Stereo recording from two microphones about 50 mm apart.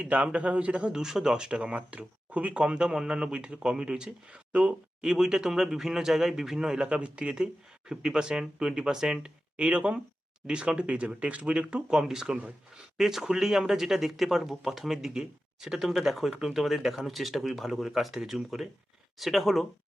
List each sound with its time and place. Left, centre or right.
0.0 s speech: right
1.0 s speech: centre
5.0 s speech: centre
6.8 s speech: right
9.6 s speech: right; by 19.6 s centre